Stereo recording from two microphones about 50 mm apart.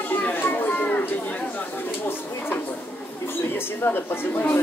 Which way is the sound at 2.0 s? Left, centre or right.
Left.